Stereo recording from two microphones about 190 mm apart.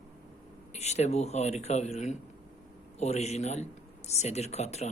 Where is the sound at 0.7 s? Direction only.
35° left (ahead or behind).